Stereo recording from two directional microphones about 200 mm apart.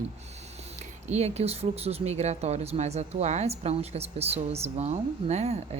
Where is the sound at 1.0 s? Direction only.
35° right (ahead or behind).